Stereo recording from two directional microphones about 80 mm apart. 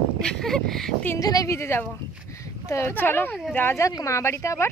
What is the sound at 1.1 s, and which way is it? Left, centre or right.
Speech, left.